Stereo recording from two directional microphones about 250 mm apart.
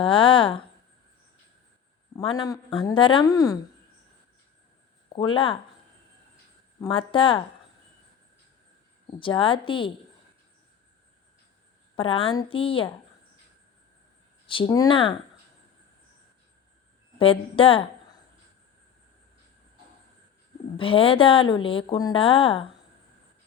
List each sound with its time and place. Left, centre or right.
0.0 s a woman's voice: centre
2.1 s speech: centre
5.0 s speech: centre
6.7 s speech: centre
9.1 s speech: centre
11.9 s speech: left
14.4 s speech: centre
17.2 s speech: left
20.7 s speech: left